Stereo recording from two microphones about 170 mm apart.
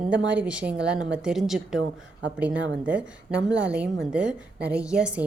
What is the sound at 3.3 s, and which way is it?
Speech, 90° right.